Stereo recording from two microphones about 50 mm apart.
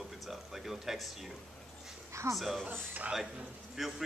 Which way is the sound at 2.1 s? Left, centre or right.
Right.